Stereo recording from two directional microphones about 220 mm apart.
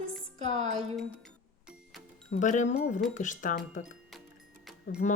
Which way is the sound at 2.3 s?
35° left (ahead or behind).